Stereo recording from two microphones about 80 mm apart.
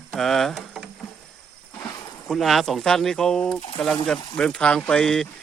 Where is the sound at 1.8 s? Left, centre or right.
Left.